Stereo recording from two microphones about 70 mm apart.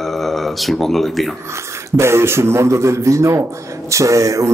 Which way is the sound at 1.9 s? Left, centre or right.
Right.